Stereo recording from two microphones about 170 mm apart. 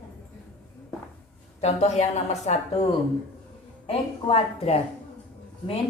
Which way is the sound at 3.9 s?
35° left (ahead or behind).